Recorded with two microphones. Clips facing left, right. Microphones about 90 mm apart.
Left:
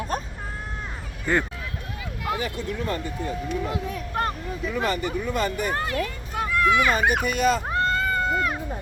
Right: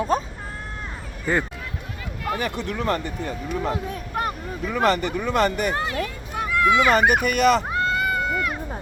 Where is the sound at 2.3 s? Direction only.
65° right (ahead or behind).